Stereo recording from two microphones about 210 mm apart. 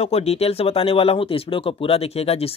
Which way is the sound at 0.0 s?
30° left (ahead or behind).